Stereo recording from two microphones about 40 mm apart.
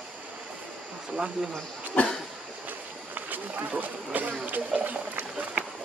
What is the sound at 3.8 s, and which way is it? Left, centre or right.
Speech, right.